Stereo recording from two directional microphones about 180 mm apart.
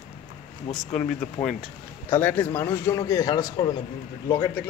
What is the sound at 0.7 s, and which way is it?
Speech, 35° left (ahead or behind).